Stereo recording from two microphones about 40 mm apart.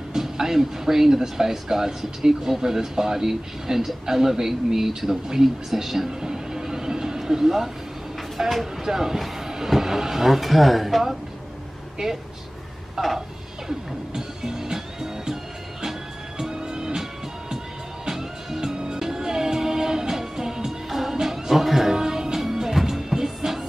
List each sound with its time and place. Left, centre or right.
0.1 s speech: centre
6.0 s music: centre
8.4 s speech: centre
8.8 s speech: centre
12.9 s a sound: centre
13.7 s music: centre